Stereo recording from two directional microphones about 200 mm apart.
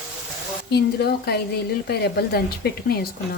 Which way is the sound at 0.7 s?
55° left (ahead or behind).